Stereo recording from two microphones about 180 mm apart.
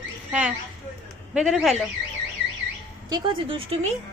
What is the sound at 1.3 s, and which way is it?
Speech, centre (ahead or behind).